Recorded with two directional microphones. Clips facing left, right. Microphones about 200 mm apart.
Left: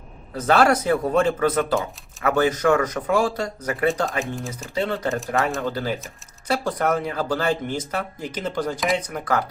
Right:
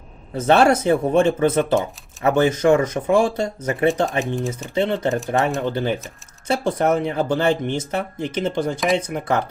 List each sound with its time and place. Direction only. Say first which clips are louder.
0.3 s speech: right 3 dB; 25° right (ahead or behind)
4.2 s speech: right 5 dB; centre (ahead or behind)
4.7 s speech: right 3 dB; 25° right (ahead or behind)